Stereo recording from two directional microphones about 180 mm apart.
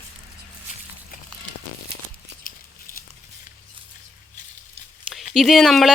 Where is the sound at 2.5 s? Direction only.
55° left (ahead or behind).